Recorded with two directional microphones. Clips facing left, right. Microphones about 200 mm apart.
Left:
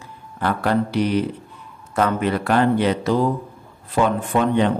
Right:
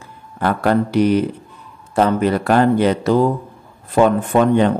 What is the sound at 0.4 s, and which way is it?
Speech, 50° right (ahead or behind).